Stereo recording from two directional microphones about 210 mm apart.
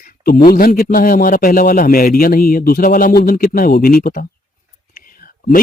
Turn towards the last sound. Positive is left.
turn(degrees=45)  # may be behind; listen again after turning